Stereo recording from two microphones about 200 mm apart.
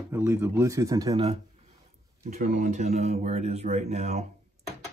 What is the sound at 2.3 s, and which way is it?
Speech, 40° right (ahead or behind).